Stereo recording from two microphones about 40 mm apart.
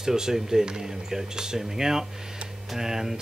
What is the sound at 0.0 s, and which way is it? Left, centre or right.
Speech, centre.